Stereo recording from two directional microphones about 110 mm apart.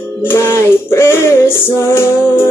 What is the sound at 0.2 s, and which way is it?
Music, 20° left (ahead or behind).